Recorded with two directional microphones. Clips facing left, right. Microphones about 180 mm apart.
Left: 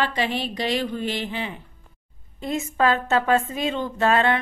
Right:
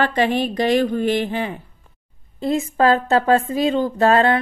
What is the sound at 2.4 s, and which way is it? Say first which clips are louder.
Speech: right 5 dB; 35° right (ahead or behind).